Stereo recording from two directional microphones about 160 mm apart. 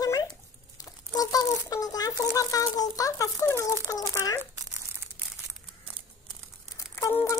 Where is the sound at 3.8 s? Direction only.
25° left (ahead or behind).